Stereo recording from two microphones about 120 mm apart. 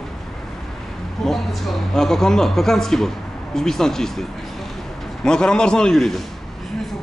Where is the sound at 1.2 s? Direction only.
Centre (ahead or behind).